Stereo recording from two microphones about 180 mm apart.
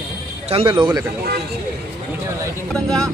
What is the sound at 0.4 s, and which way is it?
Speech, 35° right (ahead or behind).